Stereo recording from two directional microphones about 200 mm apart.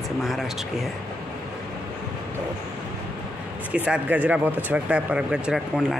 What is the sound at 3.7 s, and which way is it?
Speech, 5° right (ahead or behind).